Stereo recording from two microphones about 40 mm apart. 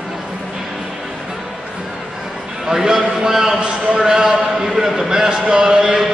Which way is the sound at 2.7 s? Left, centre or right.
Centre.